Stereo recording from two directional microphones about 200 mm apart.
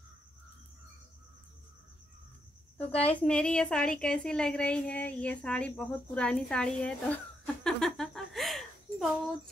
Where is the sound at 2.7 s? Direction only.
5° left (ahead or behind).